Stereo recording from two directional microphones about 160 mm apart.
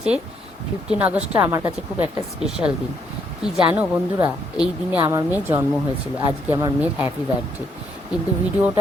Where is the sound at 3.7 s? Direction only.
10° right (ahead or behind).